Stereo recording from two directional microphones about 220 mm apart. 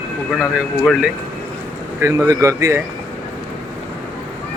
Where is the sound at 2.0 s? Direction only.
15° right (ahead or behind).